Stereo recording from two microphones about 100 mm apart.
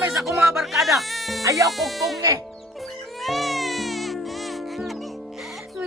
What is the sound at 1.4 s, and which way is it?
Speech, 35° right (ahead or behind).